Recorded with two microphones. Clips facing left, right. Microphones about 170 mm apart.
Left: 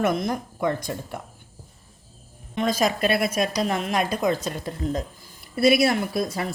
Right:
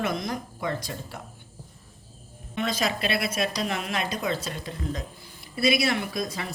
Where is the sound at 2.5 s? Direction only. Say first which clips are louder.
Left 5 dB; 45° left (ahead or behind).